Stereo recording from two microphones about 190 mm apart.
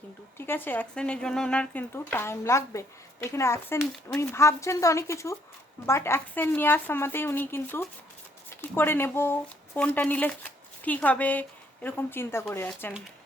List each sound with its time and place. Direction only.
0.3 s speech: 10° left (ahead or behind)